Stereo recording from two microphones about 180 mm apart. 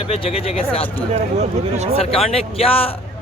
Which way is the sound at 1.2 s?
40° right (ahead or behind).